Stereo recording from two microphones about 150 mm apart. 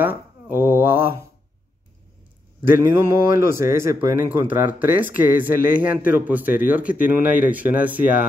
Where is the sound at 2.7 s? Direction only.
15° right (ahead or behind).